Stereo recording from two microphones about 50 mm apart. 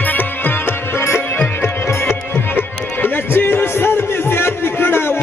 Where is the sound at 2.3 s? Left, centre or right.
Left.